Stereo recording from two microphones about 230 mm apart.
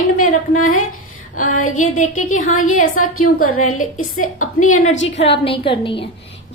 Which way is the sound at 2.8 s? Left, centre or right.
Left.